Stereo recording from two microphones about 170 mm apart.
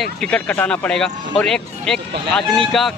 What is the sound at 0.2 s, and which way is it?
Speech, 10° left (ahead or behind).